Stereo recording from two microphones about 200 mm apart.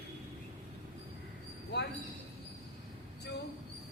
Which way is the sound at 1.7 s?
60° left (ahead or behind).